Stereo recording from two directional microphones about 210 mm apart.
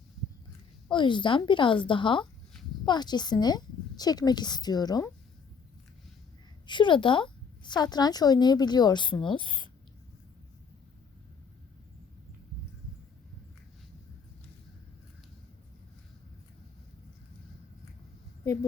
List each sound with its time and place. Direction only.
0.9 s a woman's voice: 20° left (ahead or behind)
6.7 s a woman's voice: 20° left (ahead or behind)